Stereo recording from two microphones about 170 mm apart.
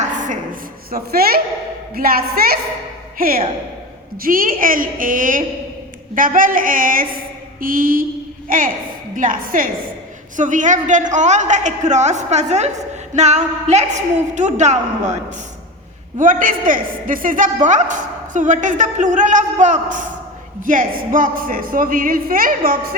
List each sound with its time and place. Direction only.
0.9 s a woman's voice: 60° right (ahead or behind)